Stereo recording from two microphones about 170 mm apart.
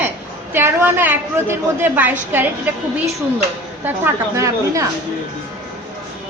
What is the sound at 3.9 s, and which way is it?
A woman's voice, 15° right (ahead or behind).